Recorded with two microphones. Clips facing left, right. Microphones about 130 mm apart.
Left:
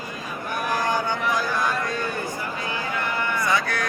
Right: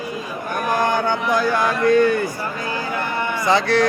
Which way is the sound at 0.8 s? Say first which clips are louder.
Right 6 dB; 65° right (ahead or behind).